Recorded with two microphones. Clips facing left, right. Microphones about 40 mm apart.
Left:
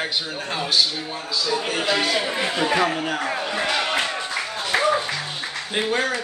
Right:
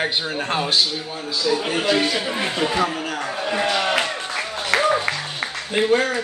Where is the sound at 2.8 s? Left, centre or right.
Centre.